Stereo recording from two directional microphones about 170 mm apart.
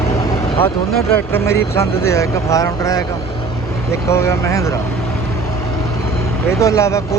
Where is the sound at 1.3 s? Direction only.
15° left (ahead or behind).